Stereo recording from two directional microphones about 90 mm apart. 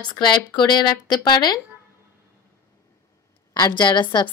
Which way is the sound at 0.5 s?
50° left (ahead or behind).